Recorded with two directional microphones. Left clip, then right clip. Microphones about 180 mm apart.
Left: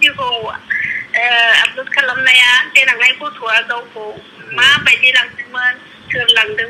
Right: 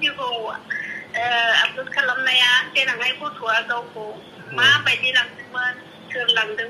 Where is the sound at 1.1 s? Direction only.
15° left (ahead or behind).